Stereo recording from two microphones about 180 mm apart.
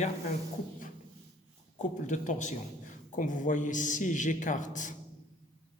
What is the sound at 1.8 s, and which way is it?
A man's voice, 40° left (ahead or behind).